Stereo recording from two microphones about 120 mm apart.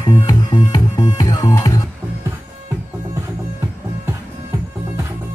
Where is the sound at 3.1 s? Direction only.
20° right (ahead or behind).